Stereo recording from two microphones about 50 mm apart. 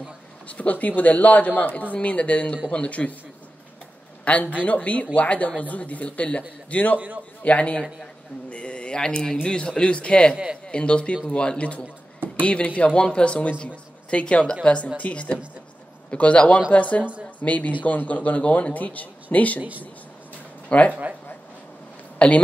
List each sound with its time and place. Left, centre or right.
0.5 s speech: left
4.2 s a sound: left
4.6 s speech: left
10.3 s speech: centre
10.7 s a man's voice: centre
20.6 s speech: left
22.2 s speech: left